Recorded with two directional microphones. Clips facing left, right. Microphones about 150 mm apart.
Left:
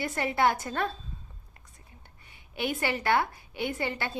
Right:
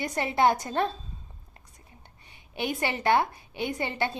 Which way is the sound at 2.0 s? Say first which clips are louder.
Right 1 dB; 20° right (ahead or behind).